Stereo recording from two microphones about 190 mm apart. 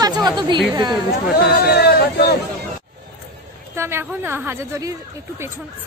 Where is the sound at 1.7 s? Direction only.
55° left (ahead or behind).